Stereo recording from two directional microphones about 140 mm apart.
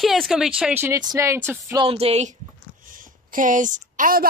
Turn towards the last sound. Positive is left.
turn(degrees=-80)